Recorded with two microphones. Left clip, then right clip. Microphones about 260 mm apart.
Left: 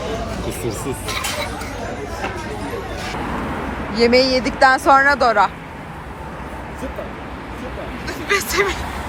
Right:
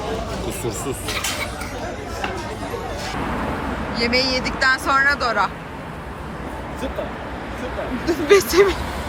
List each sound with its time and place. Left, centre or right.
3.9 s speech: centre
8.0 s speech: right